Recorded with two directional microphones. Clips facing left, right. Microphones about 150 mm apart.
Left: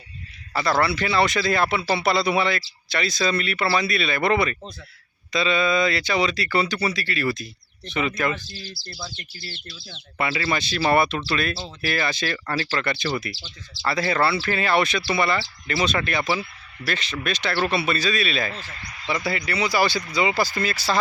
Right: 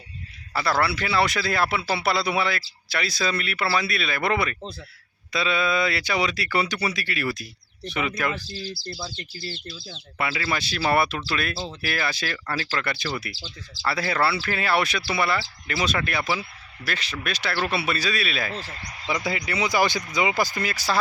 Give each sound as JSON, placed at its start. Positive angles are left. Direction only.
{"t": 0.5, "sound": "speech", "side_deg": -5}
{"t": 10.2, "sound": "speech", "side_deg": -5}
{"t": 18.5, "sound": "speech", "side_deg": -35}
{"t": 19.1, "sound": "speech", "side_deg": -15}